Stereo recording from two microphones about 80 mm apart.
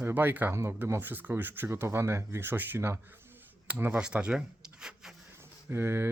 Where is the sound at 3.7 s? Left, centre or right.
Right.